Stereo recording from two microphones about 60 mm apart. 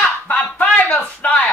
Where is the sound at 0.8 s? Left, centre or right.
Left.